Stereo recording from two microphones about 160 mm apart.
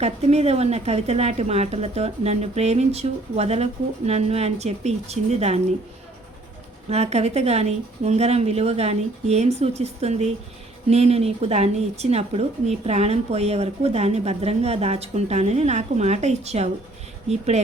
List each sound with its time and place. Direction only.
0.0 s speech: 40° right (ahead or behind)
6.9 s speech: 40° right (ahead or behind)